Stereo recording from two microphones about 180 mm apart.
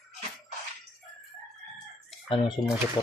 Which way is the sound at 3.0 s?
20° left (ahead or behind).